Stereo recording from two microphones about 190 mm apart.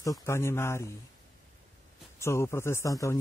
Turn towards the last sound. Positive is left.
turn(degrees=15)  # may be behind; listen again after turning